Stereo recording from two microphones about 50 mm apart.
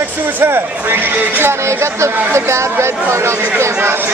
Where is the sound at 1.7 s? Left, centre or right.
Right.